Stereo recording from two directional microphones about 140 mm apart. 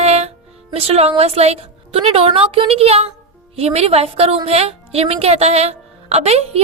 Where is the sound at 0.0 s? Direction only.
50° right (ahead or behind).